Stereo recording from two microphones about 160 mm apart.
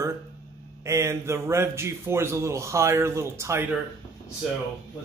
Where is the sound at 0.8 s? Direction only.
15° right (ahead or behind).